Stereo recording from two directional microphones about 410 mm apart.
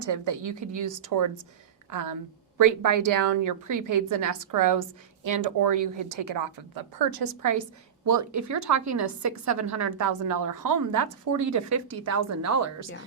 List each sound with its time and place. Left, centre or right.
0.0 s a woman's voice: right